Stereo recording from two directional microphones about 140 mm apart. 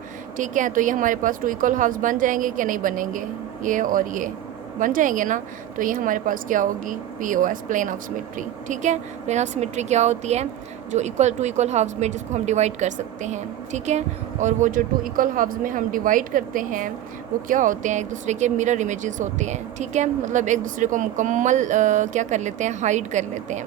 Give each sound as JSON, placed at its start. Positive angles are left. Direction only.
{"t": 0.3, "sound": "speech", "side_deg": -65}